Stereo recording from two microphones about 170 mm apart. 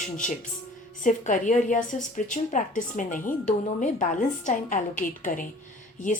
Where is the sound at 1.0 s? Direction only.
50° left (ahead or behind).